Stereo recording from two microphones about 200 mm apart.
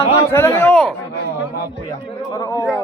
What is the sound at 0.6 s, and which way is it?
Speech, centre (ahead or behind).